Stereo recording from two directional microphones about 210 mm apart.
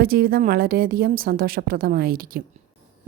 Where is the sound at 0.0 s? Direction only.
45° right (ahead or behind).